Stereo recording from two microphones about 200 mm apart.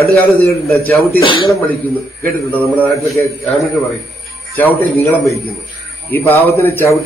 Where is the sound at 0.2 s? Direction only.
10° left (ahead or behind).